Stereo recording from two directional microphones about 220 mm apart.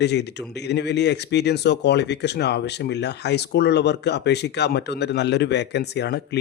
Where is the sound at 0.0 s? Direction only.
50° left (ahead or behind).